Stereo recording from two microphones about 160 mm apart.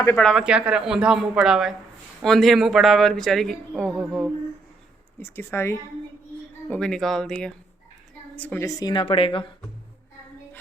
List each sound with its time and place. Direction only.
0.2 s a man's voice: centre (ahead or behind)
5.2 s speech: 15° left (ahead or behind)
6.7 s a man's voice: 5° left (ahead or behind); by 9.5 s 35° left (ahead or behind)